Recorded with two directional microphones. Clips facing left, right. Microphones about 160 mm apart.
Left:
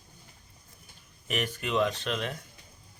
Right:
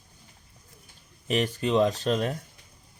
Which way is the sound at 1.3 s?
30° right (ahead or behind).